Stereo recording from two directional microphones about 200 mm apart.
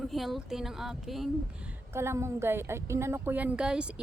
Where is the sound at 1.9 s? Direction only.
15° right (ahead or behind).